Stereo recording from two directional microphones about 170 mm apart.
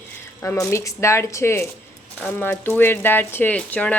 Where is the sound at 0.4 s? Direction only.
15° left (ahead or behind).